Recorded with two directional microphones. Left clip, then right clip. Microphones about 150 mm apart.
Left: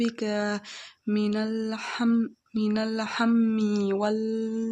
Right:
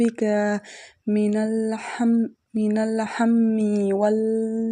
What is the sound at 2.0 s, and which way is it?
Speech, 10° right (ahead or behind).